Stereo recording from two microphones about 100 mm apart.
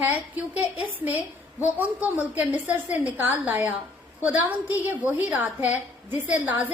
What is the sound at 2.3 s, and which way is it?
A woman's voice, 15° right (ahead or behind).